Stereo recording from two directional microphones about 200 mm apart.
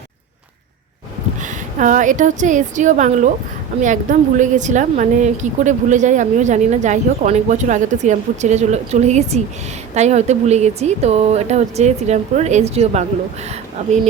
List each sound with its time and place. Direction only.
1.4 s a woman's voice: 40° right (ahead or behind)